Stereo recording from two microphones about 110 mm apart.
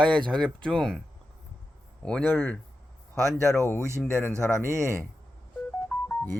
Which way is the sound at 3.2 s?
30° right (ahead or behind).